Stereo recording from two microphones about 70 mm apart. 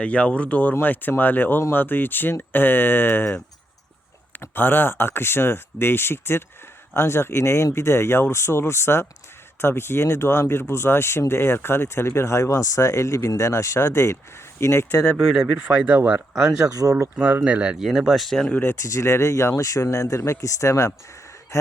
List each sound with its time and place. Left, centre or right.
0.0 s speech: centre; by 14.8 s left
15.5 s speech: right
16.3 s speech: centre
17.2 s speech: right
17.8 s speech: centre
18.8 s speech: left